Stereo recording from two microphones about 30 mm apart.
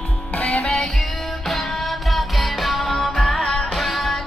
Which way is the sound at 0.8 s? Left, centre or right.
Centre.